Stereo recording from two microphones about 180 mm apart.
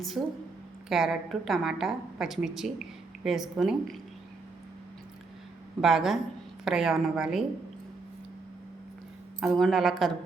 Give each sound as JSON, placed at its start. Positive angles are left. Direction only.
{"t": 0.2, "sound": "a woman's voice", "side_deg": -5}
{"t": 5.8, "sound": "a woman's voice", "side_deg": 0}
{"t": 9.4, "sound": "a woman's voice", "side_deg": 0}